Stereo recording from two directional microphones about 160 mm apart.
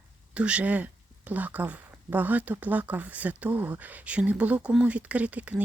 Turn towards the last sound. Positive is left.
turn(degrees=-10)  # may be behind; listen again after turning